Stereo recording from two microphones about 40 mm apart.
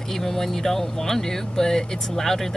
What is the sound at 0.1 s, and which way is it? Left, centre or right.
Speech, centre.